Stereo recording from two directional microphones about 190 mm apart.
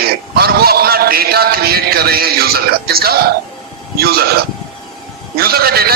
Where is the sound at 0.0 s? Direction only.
55° right (ahead or behind).